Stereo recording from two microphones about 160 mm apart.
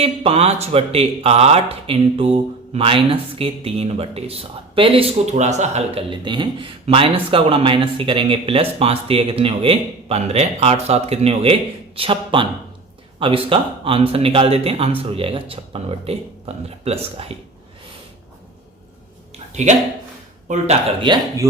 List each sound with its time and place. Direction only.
0.0 s speech: 40° right (ahead or behind)
21.0 s speech: 30° right (ahead or behind)